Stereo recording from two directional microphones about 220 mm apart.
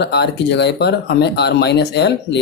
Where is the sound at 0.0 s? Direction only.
50° left (ahead or behind).